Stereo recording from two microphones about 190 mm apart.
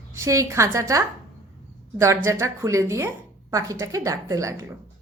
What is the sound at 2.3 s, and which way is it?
A woman's voice, 15° right (ahead or behind).